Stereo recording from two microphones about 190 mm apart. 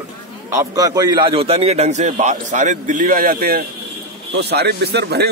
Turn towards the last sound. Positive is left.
turn(degrees=-60)  # may be behind; listen again after turning